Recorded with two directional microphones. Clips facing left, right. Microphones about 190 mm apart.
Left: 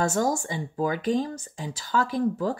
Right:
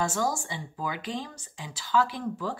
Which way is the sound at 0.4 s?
45° left (ahead or behind).